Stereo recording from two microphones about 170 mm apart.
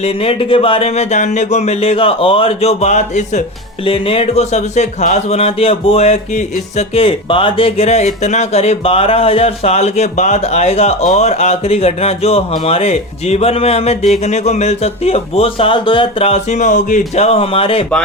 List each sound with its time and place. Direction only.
0.0 s speech: 35° left (ahead or behind)
3.8 s speech: 30° left (ahead or behind)